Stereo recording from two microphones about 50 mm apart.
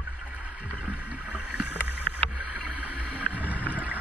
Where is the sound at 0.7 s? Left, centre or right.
Right.